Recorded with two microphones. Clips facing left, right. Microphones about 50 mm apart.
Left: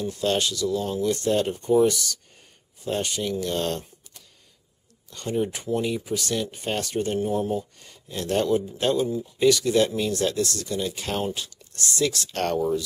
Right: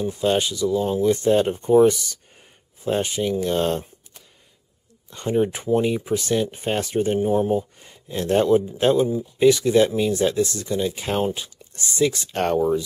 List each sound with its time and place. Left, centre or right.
0.0 s speech: centre